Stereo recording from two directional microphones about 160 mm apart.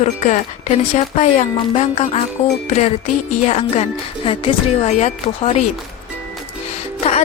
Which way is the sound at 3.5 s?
45° left (ahead or behind).